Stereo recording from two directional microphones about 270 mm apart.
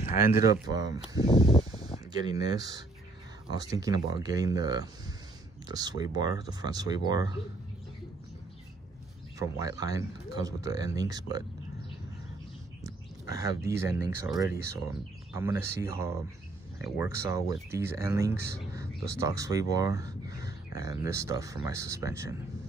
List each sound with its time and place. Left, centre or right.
0.0 s a sound: left
0.5 s speech: centre
1.2 s a sound: centre
2.1 s speech: centre
9.4 s speech: centre
13.3 s speech: centre